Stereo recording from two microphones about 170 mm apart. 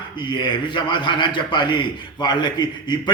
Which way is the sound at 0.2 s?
25° left (ahead or behind).